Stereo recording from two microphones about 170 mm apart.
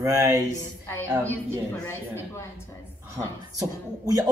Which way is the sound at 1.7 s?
15° left (ahead or behind).